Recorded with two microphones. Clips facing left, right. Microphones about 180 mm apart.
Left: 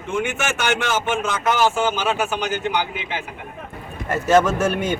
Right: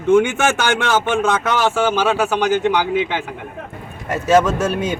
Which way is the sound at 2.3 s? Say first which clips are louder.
Right 6 dB; 90° right.